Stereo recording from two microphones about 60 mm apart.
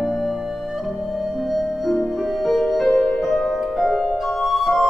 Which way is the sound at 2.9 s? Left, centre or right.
Centre.